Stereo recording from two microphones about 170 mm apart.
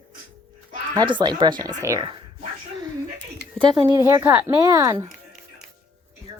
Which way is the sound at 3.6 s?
30° right (ahead or behind).